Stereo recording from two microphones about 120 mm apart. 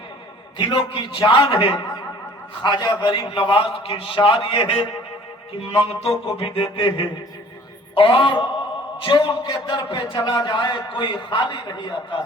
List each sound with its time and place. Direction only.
0.6 s a man's voice: 45° left (ahead or behind)